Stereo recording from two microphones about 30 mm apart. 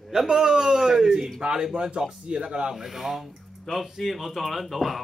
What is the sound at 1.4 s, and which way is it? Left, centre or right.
Speech, right.